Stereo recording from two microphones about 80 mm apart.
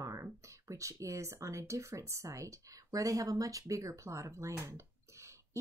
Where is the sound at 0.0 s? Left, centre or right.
Right.